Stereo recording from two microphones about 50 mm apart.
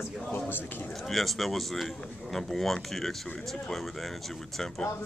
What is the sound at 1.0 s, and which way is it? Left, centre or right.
Speech, centre.